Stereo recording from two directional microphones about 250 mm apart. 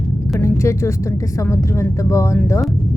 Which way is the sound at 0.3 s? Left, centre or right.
Centre.